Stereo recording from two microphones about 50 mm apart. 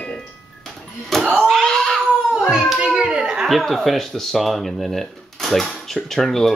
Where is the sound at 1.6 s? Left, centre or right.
Centre.